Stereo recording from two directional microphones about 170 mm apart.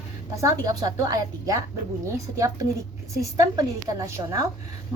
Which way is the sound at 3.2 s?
20° right (ahead or behind).